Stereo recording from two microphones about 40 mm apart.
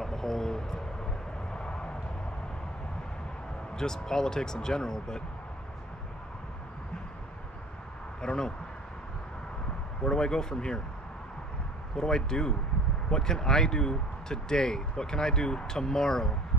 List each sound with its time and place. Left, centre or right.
0.0 s a sound: centre
1.5 s vehicle: left
3.7 s speech: centre
8.2 s speech: centre
10.0 s speech: centre
12.0 s speech: centre